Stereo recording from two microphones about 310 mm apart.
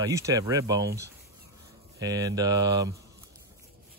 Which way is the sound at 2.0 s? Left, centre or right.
Centre.